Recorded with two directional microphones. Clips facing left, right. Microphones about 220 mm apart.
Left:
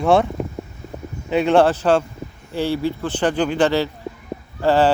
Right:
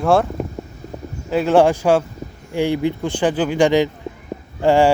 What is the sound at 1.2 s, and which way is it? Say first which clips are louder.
Speech: right 1 dB; centre (ahead or behind).